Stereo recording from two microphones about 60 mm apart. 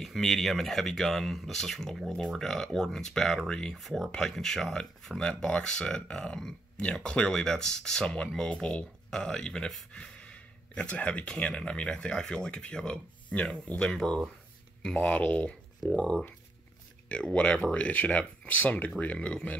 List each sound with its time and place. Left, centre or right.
0.0 s speech: centre
15.0 s speech: left